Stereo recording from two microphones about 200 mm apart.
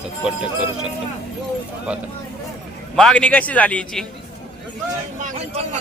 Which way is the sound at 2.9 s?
5° left (ahead or behind).